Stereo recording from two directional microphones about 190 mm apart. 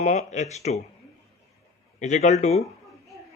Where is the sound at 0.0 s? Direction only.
40° left (ahead or behind).